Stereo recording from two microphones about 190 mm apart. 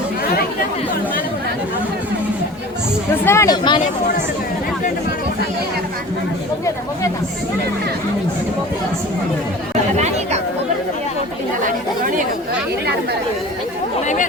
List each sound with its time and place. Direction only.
3.2 s speech: 15° left (ahead or behind)
11.6 s speech: 45° right (ahead or behind)